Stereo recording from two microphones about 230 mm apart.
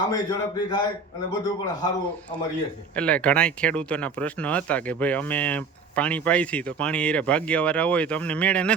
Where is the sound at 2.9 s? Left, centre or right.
Centre.